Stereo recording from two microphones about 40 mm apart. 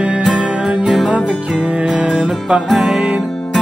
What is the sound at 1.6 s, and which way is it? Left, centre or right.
Music, right.